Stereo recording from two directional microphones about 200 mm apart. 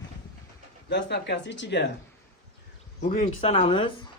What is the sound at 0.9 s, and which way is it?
Speech, 60° left (ahead or behind).